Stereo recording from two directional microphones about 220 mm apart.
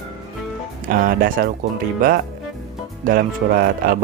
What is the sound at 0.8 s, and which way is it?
Speech, 40° right (ahead or behind).